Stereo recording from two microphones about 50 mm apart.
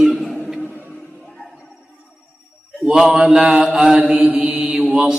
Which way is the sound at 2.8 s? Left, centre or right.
Centre.